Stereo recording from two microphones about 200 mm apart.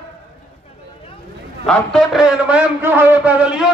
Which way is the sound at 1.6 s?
Centre (ahead or behind).